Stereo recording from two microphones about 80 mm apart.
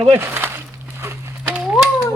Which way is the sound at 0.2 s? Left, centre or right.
Right.